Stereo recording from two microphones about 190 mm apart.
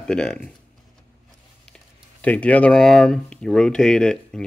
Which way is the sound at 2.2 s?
5° left (ahead or behind).